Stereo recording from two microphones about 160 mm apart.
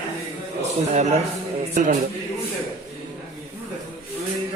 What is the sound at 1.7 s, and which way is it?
Speech, 50° right (ahead or behind).